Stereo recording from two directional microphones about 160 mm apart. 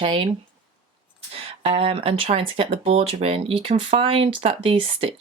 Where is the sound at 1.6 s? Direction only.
40° right (ahead or behind).